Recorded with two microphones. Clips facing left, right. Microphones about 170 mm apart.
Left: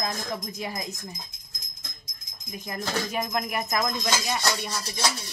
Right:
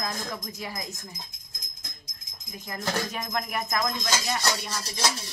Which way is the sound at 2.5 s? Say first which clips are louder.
Even; 15° left (ahead or behind).